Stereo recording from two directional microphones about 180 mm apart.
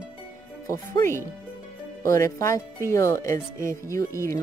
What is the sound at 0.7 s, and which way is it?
Speech, 15° left (ahead or behind).